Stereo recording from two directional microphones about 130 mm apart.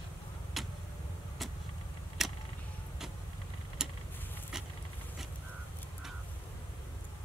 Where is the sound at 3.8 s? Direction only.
5° right (ahead or behind).